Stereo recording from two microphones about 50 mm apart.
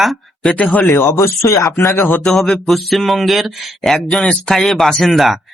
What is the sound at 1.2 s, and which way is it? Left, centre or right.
Speech, left.